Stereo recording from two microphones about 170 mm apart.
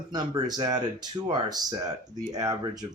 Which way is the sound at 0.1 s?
25° right (ahead or behind).